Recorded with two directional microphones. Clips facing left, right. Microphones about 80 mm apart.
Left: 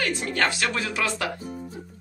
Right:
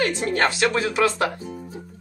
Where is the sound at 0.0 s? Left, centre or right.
Right.